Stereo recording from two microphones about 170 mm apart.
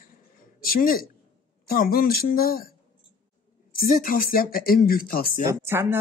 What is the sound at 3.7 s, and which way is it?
Speech, 60° left (ahead or behind).